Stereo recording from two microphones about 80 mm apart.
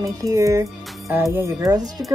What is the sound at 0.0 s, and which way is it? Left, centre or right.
Speech, right.